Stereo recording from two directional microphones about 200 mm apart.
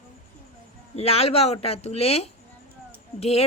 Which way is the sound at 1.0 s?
30° left (ahead or behind).